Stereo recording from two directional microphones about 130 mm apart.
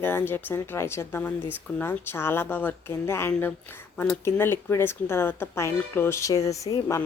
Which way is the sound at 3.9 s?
10° left (ahead or behind).